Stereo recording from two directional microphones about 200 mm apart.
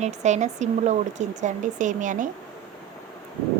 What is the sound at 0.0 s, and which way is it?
Speech, 35° right (ahead or behind).